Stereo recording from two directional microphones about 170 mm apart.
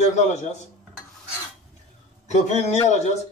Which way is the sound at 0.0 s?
40° left (ahead or behind).